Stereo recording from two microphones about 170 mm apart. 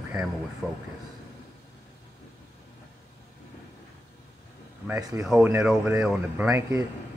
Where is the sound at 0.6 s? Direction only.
Centre (ahead or behind).